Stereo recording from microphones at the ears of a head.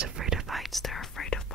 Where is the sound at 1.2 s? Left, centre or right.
Left.